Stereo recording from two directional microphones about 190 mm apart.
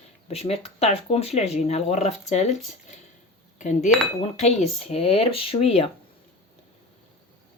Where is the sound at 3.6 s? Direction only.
40° left (ahead or behind).